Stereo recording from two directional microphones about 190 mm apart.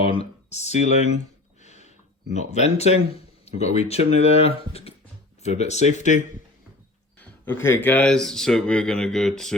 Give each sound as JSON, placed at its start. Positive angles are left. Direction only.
{"t": 0.0, "sound": "speech", "side_deg": 30}
{"t": 1.6, "sound": "a sound", "side_deg": 35}
{"t": 2.3, "sound": "speech", "side_deg": 35}
{"t": 7.2, "sound": "speech", "side_deg": 10}